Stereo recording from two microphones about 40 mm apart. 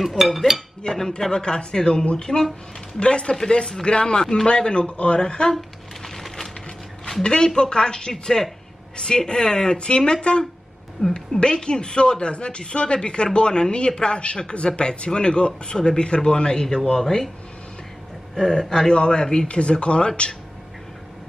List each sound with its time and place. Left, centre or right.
0.0 s speech: centre
0.8 s a man's voice: centre
6.0 s wood: centre
7.2 s a man's voice: left
11.1 s speech: left
18.3 s a man's voice: centre